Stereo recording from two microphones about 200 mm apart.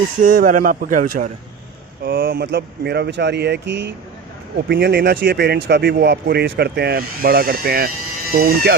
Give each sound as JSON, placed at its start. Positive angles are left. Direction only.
{"t": 0.2, "sound": "speech", "side_deg": -40}